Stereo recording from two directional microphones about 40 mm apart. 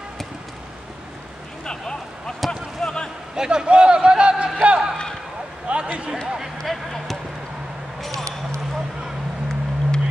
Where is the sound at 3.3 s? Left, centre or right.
Right.